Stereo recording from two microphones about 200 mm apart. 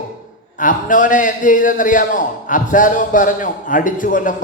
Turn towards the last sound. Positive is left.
turn(degrees=40)  # may be behind; listen again after turning